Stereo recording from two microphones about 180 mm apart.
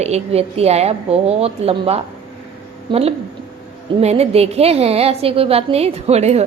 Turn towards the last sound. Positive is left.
turn(degrees=-35)  # may be behind; listen again after turning